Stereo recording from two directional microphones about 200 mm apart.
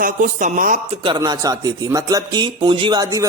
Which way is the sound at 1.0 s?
20° right (ahead or behind).